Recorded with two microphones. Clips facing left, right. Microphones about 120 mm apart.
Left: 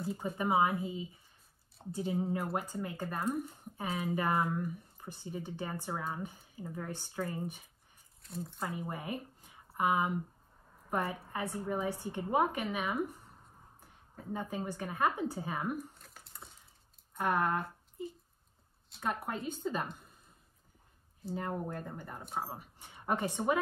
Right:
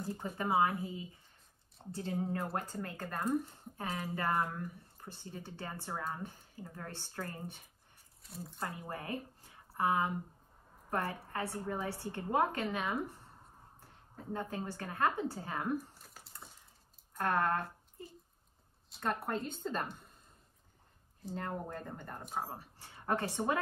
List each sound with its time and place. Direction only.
0.2 s speech: 15° left (ahead or behind)
2.1 s speech: centre (ahead or behind)
2.5 s speech: 15° left (ahead or behind)
8.2 s speech: centre (ahead or behind)
8.7 s a woman's voice: 15° left (ahead or behind)
14.3 s speech: 15° left (ahead or behind)
15.9 s a sound: centre (ahead or behind)
17.2 s speech: 10° left (ahead or behind)
21.2 s speech: 5° left (ahead or behind)
22.5 s a woman's voice: 15° left (ahead or behind)